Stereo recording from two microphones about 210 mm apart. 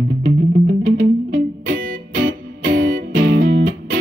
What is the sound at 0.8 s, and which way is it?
Music, 40° right (ahead or behind).